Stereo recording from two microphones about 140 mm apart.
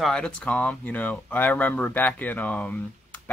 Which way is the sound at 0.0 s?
5° left (ahead or behind).